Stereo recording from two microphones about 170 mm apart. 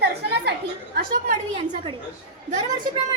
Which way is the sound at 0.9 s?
50° right (ahead or behind).